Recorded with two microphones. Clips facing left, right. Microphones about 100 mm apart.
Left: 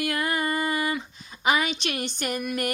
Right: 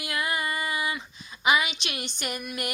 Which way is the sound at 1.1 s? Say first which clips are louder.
Right 1 dB; 40° left (ahead or behind).